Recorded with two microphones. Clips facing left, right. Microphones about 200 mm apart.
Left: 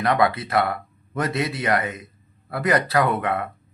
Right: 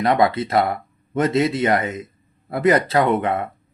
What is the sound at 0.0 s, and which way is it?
A man's voice, 25° right (ahead or behind).